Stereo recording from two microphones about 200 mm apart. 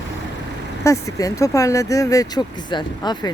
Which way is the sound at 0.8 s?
15° left (ahead or behind).